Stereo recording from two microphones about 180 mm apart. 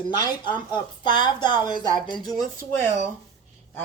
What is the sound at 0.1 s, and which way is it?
Speech, 25° left (ahead or behind).